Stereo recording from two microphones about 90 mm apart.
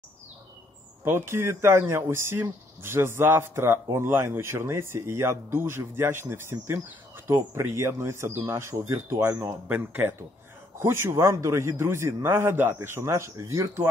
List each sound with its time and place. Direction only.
1.0 s speech: 25° right (ahead or behind)